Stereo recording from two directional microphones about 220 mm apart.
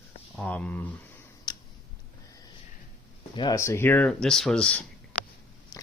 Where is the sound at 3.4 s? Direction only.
15° left (ahead or behind).